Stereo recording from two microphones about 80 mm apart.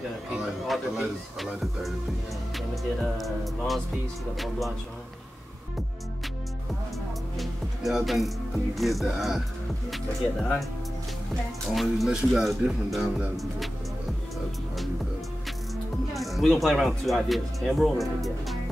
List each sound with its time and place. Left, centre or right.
0.4 s speech: centre
7.3 s music: centre
8.7 s speech: centre
11.7 s speech: centre
15.4 s speech: centre